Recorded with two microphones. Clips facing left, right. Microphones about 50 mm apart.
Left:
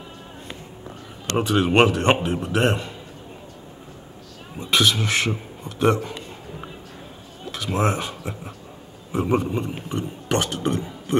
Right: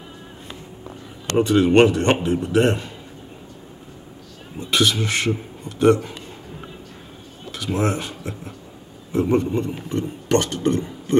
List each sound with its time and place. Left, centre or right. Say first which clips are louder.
1.3 s speech: right 4 dB; centre
4.6 s speech: even; centre
7.6 s speech: even; centre